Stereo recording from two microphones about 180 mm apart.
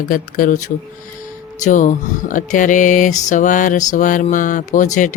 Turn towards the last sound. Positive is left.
turn(degrees=45)  # may be behind; listen again after turning